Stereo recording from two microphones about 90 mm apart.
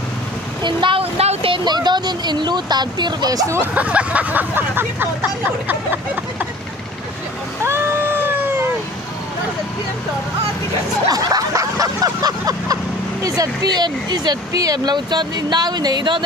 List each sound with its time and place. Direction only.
0.6 s a sound: 60° right (ahead or behind); by 1.6 s 80° right
1.6 s speech: 55° right (ahead or behind)
3.7 s speech: 15° right (ahead or behind)
7.6 s cat: 25° right (ahead or behind)
11.1 s vehicle: 45° right (ahead or behind)
13.2 s speech: 45° right (ahead or behind)